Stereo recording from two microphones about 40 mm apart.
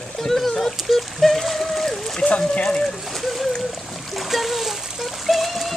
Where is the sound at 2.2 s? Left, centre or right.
Left.